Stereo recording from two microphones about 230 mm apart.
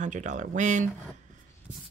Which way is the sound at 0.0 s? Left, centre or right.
Right.